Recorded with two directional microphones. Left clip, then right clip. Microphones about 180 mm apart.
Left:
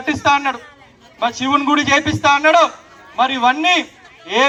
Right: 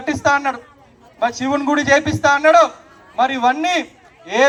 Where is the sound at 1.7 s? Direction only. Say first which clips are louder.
Even; 25° right (ahead or behind).